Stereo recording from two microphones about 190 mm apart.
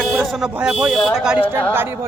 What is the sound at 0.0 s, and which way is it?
Speech, 5° right (ahead or behind).